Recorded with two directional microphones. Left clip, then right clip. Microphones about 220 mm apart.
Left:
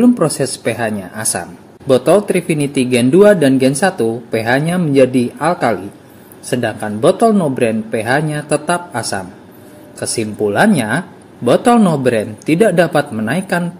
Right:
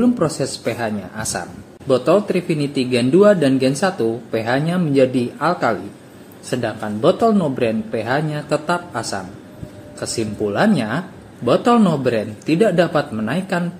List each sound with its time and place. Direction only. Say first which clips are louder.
0.0 s speech: left 5 dB; 30° left (ahead or behind)